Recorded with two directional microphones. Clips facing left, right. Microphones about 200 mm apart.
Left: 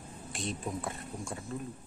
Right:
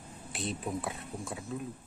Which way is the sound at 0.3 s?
Centre (ahead or behind).